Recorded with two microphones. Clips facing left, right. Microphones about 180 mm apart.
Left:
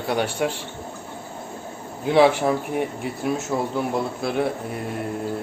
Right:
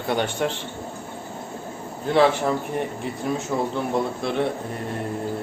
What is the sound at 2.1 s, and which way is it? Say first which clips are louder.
Speech: left 2 dB; 10° left (ahead or behind).